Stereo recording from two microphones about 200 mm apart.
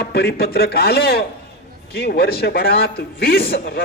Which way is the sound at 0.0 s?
55° left (ahead or behind).